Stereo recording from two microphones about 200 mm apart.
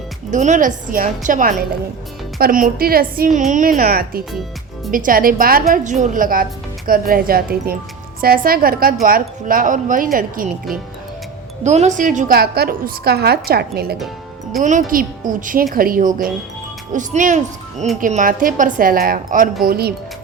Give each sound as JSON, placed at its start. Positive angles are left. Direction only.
{"t": 0.3, "sound": "a woman's voice", "side_deg": -35}
{"t": 11.6, "sound": "a woman's voice", "side_deg": -35}
{"t": 14.6, "sound": "a woman's voice", "side_deg": -40}